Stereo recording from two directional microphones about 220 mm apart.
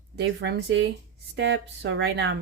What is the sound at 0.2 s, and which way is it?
Speech, 50° right (ahead or behind).